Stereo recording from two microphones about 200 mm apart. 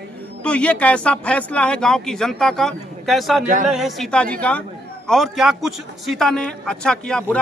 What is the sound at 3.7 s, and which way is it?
Speech, centre (ahead or behind).